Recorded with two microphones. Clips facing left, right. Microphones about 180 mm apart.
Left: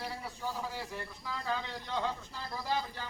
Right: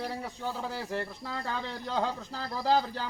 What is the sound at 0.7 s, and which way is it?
Speech, 75° right (ahead or behind).